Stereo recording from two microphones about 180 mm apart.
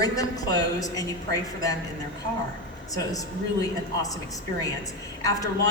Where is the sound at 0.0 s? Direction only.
20° left (ahead or behind).